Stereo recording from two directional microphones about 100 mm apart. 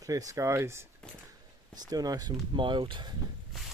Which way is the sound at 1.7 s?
40° right (ahead or behind).